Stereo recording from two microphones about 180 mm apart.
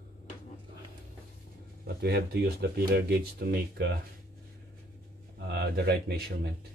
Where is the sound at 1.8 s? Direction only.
65° right (ahead or behind).